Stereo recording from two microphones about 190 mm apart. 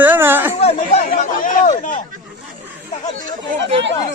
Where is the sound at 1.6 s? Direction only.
35° left (ahead or behind).